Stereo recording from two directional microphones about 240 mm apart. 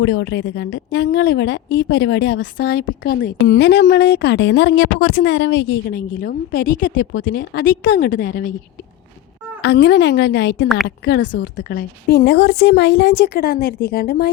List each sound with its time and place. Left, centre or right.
0.0 s a woman's voice: left
9.6 s a woman's voice: left